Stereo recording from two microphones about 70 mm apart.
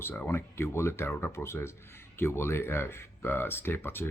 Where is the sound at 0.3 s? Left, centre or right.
Left.